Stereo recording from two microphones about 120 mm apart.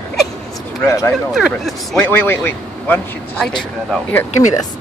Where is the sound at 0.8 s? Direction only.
20° left (ahead or behind).